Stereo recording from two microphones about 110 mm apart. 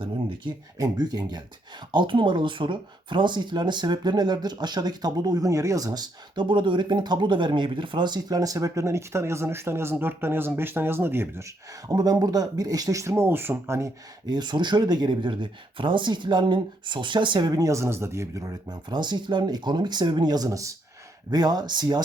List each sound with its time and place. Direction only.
0.0 s a sound: 50° right (ahead or behind)
0.8 s speech: 35° right (ahead or behind); by 11.4 s 20° right (ahead or behind)
11.9 s speech: 35° right (ahead or behind)
14.3 s speech: 40° right (ahead or behind)